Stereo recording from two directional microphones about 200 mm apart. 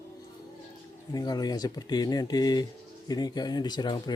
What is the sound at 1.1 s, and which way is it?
Speech, 20° left (ahead or behind).